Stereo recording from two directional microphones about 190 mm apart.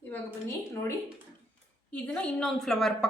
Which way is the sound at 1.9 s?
5° left (ahead or behind).